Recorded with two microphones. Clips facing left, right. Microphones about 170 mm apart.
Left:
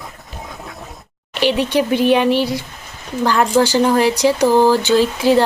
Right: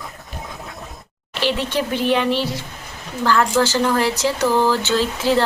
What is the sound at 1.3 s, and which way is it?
Speech, 15° left (ahead or behind).